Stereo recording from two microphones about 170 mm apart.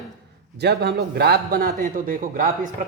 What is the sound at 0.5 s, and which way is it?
A man's voice, 75° right (ahead or behind).